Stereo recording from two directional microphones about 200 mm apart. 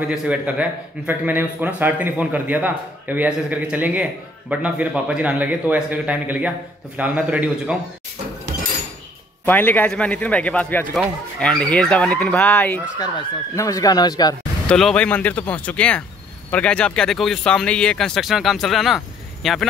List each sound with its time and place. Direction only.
0.1 s a man's voice: 5° right (ahead or behind)
9.5 s a man's voice: 10° left (ahead or behind)
14.7 s a man's voice: 5° left (ahead or behind)